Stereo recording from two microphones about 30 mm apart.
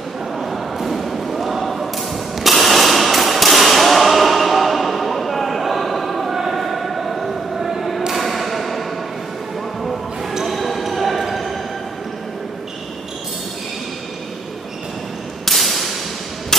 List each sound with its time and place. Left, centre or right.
0.4 s thump: centre
6.6 s a sound: centre
8.1 s thump: centre
10.4 s basketball bounce: centre
10.8 s a sound: centre
15.4 s whip: centre